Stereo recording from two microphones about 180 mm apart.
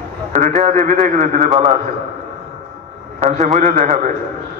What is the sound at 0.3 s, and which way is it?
A man's voice, 45° right (ahead or behind).